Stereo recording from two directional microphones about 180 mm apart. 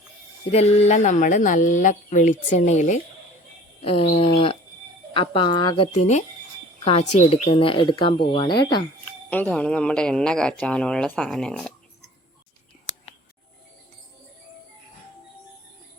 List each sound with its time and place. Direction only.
0.5 s speech: 35° left (ahead or behind)
3.8 s a sound: 35° left (ahead or behind)
5.1 s speech: 30° left (ahead or behind)
9.0 s speech: 10° left (ahead or behind)